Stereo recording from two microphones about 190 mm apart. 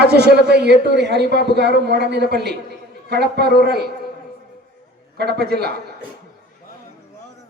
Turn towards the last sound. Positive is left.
turn(degrees=-60)  # may be behind; listen again after turning